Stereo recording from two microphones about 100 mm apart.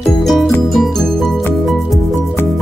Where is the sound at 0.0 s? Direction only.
Centre (ahead or behind).